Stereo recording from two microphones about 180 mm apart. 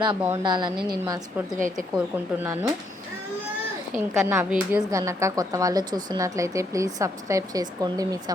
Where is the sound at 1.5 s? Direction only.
50° right (ahead or behind).